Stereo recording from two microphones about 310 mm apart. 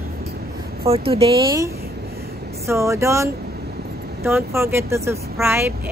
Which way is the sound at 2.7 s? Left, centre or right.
Centre.